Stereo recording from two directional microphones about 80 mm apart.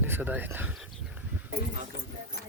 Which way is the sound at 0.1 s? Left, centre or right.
Right.